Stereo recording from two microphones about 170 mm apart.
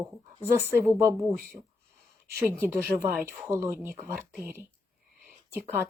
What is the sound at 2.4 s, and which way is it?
Speech, 10° right (ahead or behind).